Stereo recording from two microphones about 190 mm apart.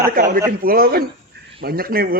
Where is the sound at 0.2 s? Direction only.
55° right (ahead or behind).